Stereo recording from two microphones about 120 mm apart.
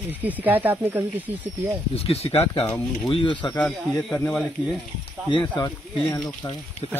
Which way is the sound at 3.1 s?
45° left (ahead or behind).